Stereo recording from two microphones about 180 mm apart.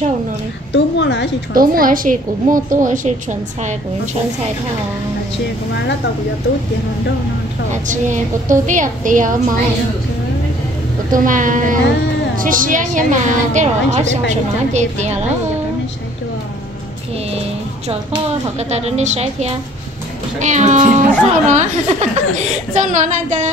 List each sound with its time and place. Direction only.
0.7 s a woman's voice: 75° left (ahead or behind)
1.5 s a child's voice: 50° right (ahead or behind)
7.7 s a child's voice: 45° right (ahead or behind)
11.1 s a child's voice: 45° right (ahead or behind)
18.6 s a woman's voice: 35° right (ahead or behind)